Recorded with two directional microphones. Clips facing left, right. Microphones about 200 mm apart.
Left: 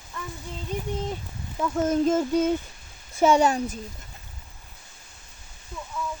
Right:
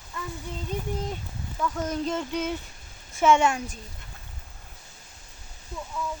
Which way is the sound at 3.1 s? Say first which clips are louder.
Left 2 dB; 35° left (ahead or behind).